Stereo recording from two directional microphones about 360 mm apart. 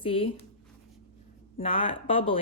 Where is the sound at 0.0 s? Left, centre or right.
Centre.